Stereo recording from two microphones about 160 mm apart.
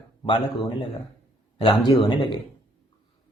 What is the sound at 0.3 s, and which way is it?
A woman's voice, 30° left (ahead or behind).